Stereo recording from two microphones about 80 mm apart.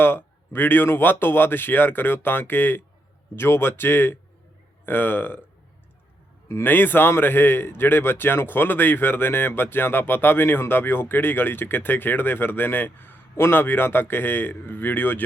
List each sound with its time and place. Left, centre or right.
0.0 s a man's voice: left
6.5 s a man's voice: left